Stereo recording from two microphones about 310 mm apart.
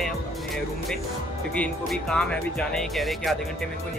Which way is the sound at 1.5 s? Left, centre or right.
Centre.